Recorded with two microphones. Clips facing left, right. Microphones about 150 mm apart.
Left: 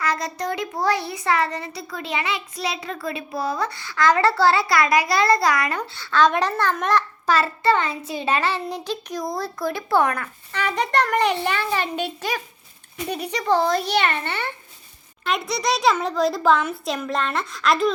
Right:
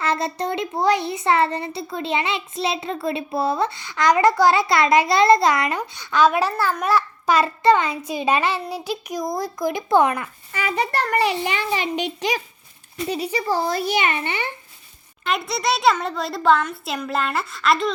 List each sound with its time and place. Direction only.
0.0 s a child's voice: 30° right (ahead or behind)
13.1 s speech: 60° left (ahead or behind)
13.5 s a child's voice: 5° right (ahead or behind)
15.2 s a child's voice: centre (ahead or behind)